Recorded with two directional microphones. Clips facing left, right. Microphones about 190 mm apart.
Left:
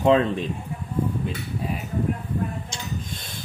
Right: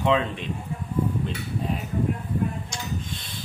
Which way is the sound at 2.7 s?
25° left (ahead or behind).